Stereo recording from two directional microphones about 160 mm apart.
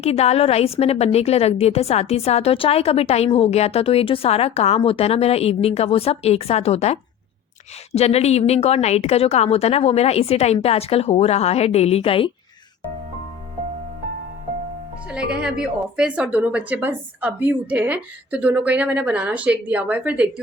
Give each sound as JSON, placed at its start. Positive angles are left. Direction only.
{"t": 0.0, "sound": "a woman's voice", "side_deg": 40}
{"t": 15.0, "sound": "speech", "side_deg": -5}